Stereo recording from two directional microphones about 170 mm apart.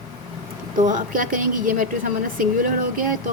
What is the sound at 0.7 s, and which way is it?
A woman's voice, 50° right (ahead or behind).